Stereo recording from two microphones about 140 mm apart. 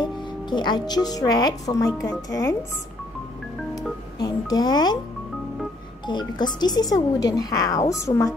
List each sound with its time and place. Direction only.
0.0 s speech: 30° left (ahead or behind)
4.2 s a child's voice: 30° left (ahead or behind)
6.0 s speech: 30° left (ahead or behind)